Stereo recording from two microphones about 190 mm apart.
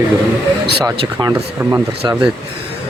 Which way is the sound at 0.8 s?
20° right (ahead or behind).